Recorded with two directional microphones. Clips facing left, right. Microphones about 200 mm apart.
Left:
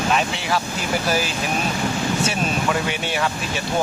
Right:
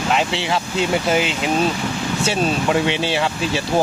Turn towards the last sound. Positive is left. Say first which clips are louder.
# right 4 dB
turn(degrees=-25)  # may be behind; listen again after turning